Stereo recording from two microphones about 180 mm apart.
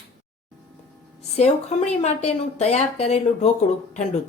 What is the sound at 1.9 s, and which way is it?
Speech, 40° left (ahead or behind).